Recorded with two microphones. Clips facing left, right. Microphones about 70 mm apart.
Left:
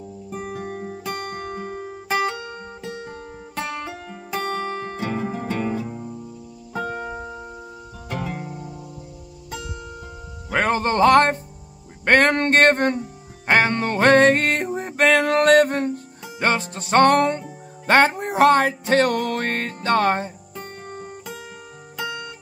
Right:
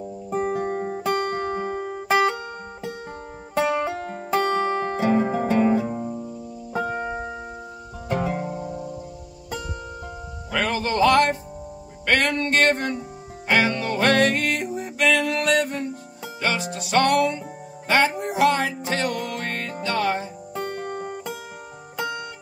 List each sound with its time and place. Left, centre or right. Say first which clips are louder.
0.3 s music: right 7 dB; right
3.5 s music: right 7 dB; centre
4.0 s music: right 6 dB; right
4.5 s music: right 4 dB; right
4.9 s music: right 9 dB; centre
5.2 s music: right 5 dB; right; by 8.7 s centre
10.5 s music: left 4 dB; left
20.7 s music: right 5 dB; right